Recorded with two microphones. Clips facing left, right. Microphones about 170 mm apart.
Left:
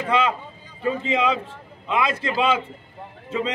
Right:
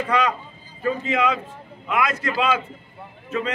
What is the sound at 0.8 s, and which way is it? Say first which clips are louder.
A man's voice: even; 25° left (ahead or behind).